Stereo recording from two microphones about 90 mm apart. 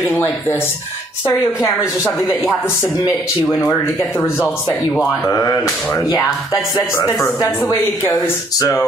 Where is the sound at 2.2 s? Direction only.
Centre (ahead or behind).